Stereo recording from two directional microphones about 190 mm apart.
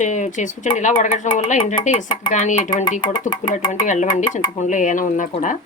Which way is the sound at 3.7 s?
40° left (ahead or behind).